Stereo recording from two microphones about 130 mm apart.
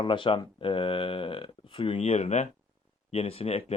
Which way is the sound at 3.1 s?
45° left (ahead or behind).